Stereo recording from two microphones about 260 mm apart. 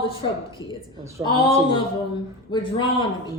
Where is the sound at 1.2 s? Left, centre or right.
Centre.